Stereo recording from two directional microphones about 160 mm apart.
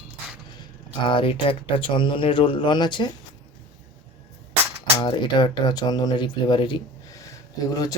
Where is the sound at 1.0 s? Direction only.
30° left (ahead or behind).